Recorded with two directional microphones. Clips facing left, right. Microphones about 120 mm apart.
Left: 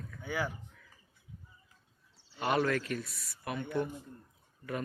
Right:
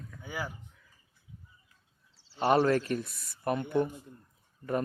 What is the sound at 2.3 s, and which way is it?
Speech, 35° right (ahead or behind).